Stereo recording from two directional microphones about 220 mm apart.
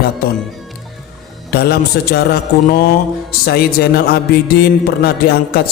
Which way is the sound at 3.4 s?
45° left (ahead or behind).